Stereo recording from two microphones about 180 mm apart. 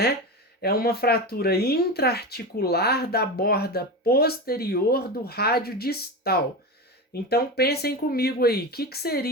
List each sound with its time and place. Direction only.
0.6 s speech: 60° left (ahead or behind)